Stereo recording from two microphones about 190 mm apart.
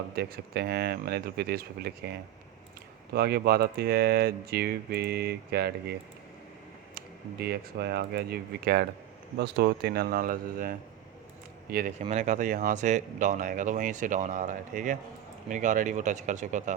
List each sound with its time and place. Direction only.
0.2 s speech: 55° right (ahead or behind)
6.9 s speech: 55° right (ahead or behind)